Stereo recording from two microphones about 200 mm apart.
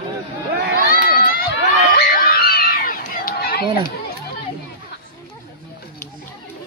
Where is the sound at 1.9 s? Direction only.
50° left (ahead or behind).